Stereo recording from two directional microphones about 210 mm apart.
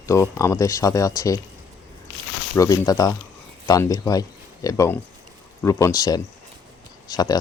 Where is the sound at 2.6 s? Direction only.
15° left (ahead or behind).